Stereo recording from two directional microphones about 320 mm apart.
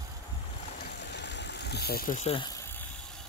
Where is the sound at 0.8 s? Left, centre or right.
Left; by 2.9 s centre.